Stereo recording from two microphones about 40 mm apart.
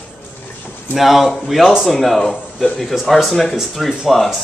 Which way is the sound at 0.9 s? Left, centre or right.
Centre.